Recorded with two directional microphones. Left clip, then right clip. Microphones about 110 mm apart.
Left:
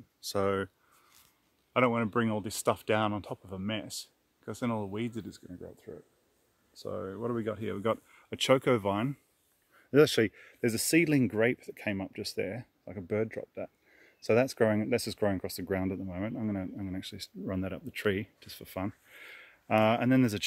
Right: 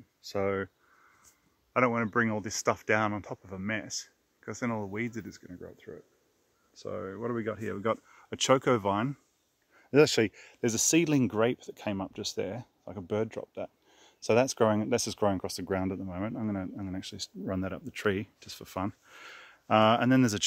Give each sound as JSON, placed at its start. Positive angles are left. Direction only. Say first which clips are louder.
{"t": 0.2, "sound": "speech", "louder": "left 1 dB", "side_deg": 20}
{"t": 1.7, "sound": "speech", "louder": "even", "side_deg": 35}
{"t": 5.5, "sound": "speech", "louder": "even", "side_deg": 5}
{"t": 6.8, "sound": "speech", "louder": "even", "side_deg": 15}